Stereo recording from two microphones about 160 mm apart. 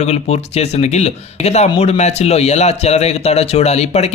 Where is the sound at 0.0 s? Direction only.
40° left (ahead or behind).